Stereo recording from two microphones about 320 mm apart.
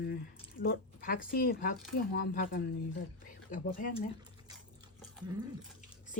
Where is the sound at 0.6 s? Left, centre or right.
Left.